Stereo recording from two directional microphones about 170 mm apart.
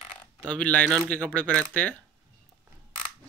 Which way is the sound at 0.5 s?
10° left (ahead or behind).